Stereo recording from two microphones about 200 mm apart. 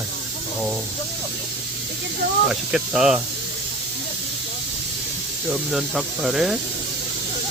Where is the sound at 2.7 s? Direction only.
5° right (ahead or behind).